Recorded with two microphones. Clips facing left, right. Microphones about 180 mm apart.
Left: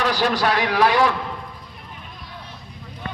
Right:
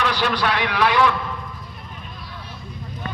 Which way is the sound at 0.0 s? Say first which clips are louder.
Left 2 dB; 40° left (ahead or behind).